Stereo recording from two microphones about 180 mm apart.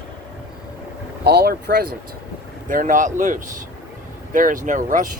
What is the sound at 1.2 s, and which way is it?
Speech, 60° right (ahead or behind).